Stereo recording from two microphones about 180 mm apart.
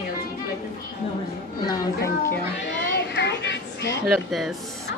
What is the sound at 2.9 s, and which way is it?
Children playing, 70° left (ahead or behind).